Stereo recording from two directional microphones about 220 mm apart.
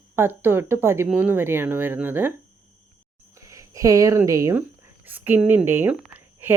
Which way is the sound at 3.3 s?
15° right (ahead or behind).